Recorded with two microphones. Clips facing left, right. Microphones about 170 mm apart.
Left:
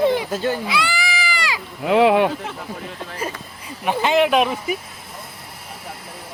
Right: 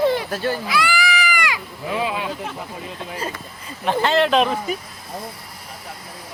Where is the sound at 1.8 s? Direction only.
70° left (ahead or behind).